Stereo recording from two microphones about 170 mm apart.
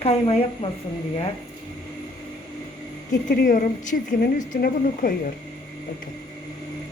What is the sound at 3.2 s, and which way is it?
Speech, 55° left (ahead or behind).